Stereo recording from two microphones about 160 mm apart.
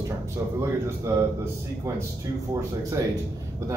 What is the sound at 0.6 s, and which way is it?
Speech, 15° right (ahead or behind).